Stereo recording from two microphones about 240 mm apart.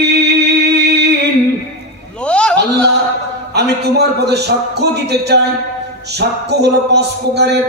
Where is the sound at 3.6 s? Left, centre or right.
Right.